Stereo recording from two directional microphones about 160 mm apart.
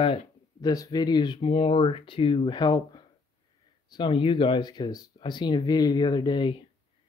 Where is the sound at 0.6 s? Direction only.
25° left (ahead or behind).